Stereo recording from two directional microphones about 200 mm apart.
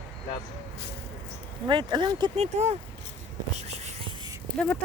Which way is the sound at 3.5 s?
35° right (ahead or behind).